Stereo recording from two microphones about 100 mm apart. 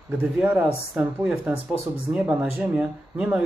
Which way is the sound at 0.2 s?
15° right (ahead or behind).